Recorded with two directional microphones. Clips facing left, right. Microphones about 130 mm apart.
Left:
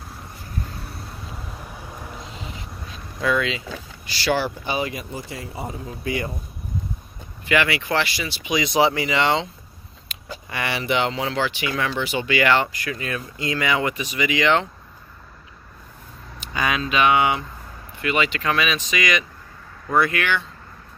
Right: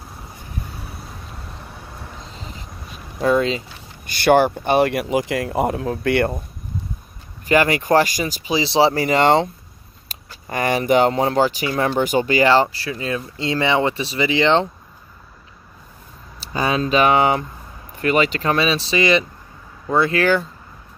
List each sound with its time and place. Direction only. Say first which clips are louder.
0.8 s vehicle: even; centre (ahead or behind)
2.3 s vehicle: left 1 dB; 35° right (ahead or behind)
3.2 s speech: right 5 dB; 40° right (ahead or behind); by 6.3 s 70° right (ahead or behind)
7.4 s speech: right 5 dB; 40° right (ahead or behind)
16.3 s speech: right 4 dB; 35° right (ahead or behind)